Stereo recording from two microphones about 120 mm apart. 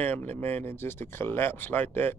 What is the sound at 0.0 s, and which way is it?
Speech, 15° left (ahead or behind).